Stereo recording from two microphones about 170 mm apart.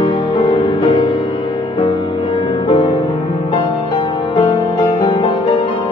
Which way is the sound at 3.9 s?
25° left (ahead or behind).